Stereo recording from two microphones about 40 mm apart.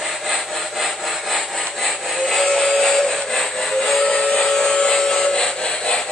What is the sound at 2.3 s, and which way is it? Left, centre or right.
Music, centre.